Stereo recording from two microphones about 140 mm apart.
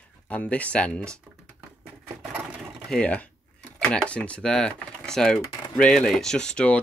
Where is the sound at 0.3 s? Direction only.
10° left (ahead or behind).